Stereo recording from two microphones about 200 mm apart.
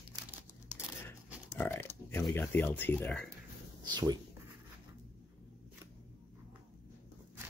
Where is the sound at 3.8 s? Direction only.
20° right (ahead or behind).